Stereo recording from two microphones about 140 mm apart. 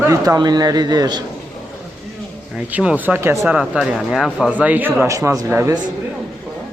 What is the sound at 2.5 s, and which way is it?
A man's voice, 10° right (ahead or behind).